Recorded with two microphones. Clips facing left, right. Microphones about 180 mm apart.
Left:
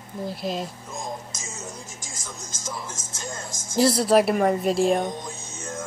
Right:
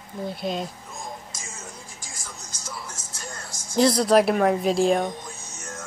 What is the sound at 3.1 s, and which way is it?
Speech, 20° left (ahead or behind).